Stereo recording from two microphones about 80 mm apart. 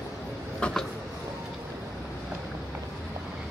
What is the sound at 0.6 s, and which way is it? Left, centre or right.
Vehicle, centre.